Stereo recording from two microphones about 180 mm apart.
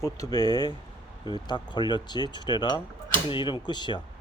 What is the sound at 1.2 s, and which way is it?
Speech, 25° left (ahead or behind).